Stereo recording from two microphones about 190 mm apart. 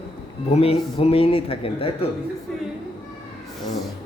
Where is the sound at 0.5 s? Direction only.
30° left (ahead or behind).